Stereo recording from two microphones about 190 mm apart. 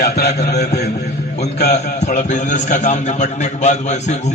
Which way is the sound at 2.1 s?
40° left (ahead or behind).